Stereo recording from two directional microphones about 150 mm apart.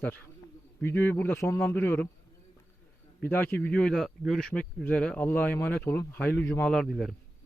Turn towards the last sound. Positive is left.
turn(degrees=0)  # may be behind; listen again after turning